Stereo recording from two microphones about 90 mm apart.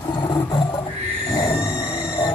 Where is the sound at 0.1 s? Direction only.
55° left (ahead or behind).